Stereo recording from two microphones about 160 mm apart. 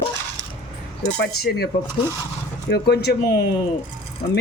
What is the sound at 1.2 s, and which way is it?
Cutlery, 90° left.